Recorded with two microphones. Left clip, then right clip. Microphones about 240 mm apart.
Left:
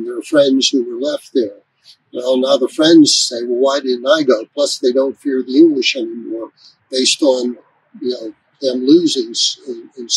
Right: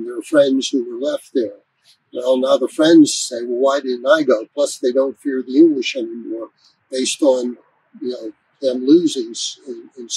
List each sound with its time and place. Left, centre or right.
0.0 s speech: centre
9.3 s speech: right